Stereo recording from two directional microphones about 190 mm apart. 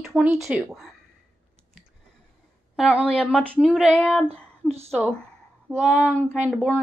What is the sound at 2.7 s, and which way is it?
A woman's voice, 5° right (ahead or behind).